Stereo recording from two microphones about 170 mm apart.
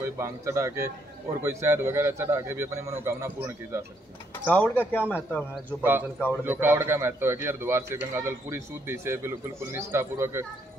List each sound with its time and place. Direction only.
0.0 s a man's voice: 15° right (ahead or behind)
4.5 s speech: 10° left (ahead or behind)
5.5 s a man's voice: 10° right (ahead or behind)